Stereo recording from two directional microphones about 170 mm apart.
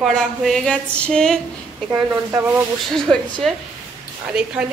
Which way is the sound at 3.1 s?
5° left (ahead or behind).